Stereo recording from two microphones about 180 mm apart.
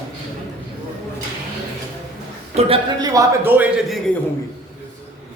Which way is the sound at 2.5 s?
35° right (ahead or behind).